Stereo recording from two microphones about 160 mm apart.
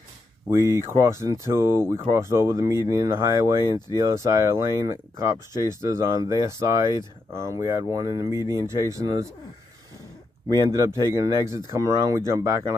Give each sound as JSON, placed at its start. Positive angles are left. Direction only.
{"t": 0.5, "sound": "speech", "side_deg": -15}
{"t": 10.5, "sound": "speech", "side_deg": -20}